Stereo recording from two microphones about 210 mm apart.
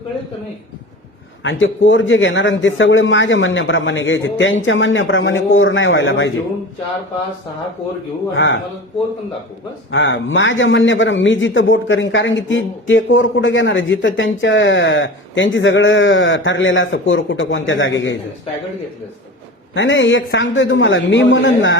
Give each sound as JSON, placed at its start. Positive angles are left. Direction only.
{"t": 1.5, "sound": "a man's voice", "side_deg": 65}
{"t": 8.4, "sound": "a man's voice", "side_deg": 65}
{"t": 9.9, "sound": "a man's voice", "side_deg": 65}
{"t": 19.7, "sound": "a man's voice", "side_deg": 60}